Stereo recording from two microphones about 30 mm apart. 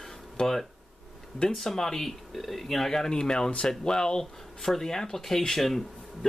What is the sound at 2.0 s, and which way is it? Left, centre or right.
Speech, centre.